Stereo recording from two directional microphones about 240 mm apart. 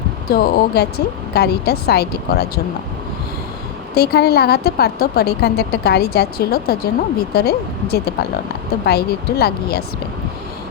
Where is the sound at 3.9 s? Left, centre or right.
Left.